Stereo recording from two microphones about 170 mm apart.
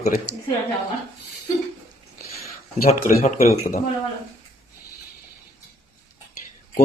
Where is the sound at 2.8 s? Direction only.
40° left (ahead or behind).